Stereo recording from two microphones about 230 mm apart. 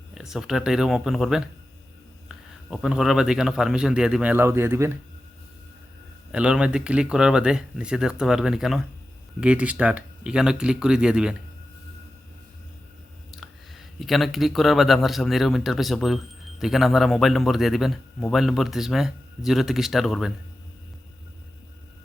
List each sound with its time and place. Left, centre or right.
0.1 s speech: centre
2.6 s speech: centre
6.3 s speech: centre
13.3 s speech: centre